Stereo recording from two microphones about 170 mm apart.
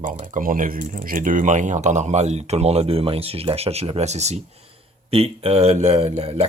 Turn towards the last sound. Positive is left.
turn(degrees=-40)  # may be behind; listen again after turning